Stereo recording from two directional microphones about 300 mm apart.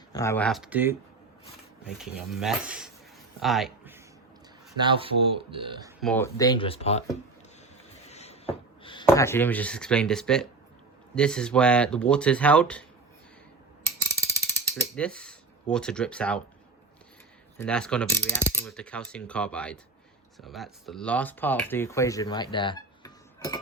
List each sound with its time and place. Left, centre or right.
0.1 s speech: centre
4.8 s speech: centre
6.0 s speech: centre
8.1 s speech: left; by 12.8 s centre
13.8 s mechanisms: centre
15.7 s speech: centre
17.6 s speech: centre